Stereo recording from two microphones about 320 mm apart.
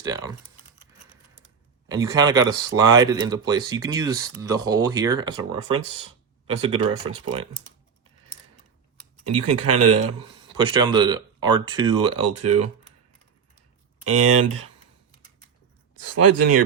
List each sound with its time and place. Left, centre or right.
0.0 s speech: centre
1.9 s speech: centre
6.8 s speech: centre
9.3 s speech: right
10.6 s speech: centre
12.2 s speech: right
14.0 s speech: right
16.0 s speech: right